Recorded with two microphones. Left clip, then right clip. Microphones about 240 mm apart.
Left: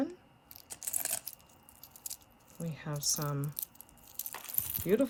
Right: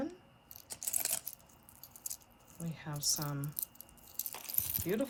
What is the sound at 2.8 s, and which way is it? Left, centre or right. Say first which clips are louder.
Speech: left 1 dB; left.